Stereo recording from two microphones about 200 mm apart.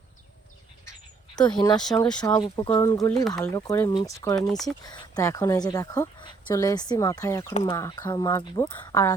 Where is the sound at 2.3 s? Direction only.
20° left (ahead or behind).